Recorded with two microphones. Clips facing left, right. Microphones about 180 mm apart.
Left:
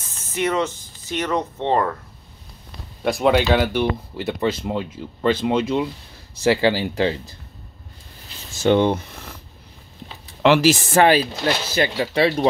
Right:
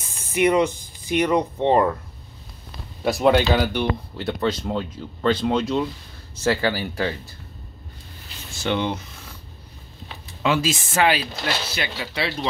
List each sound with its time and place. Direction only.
0.1 s speech: 15° right (ahead or behind)
3.0 s speech: centre (ahead or behind)
6.4 s speech: 20° left (ahead or behind)
8.6 s speech: 50° left (ahead or behind)
10.4 s speech: 70° left (ahead or behind)
11.0 s speech: 40° left (ahead or behind)